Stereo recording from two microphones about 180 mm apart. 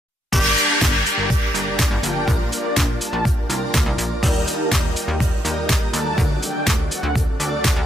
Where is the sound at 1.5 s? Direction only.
Centre (ahead or behind).